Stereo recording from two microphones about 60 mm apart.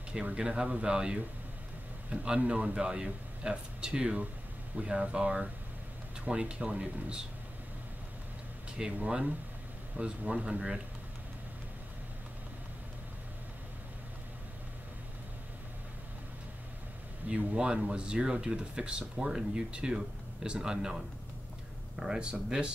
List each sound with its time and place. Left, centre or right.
0.1 s speech: centre
8.7 s speech: centre
17.3 s speech: centre
22.0 s speech: centre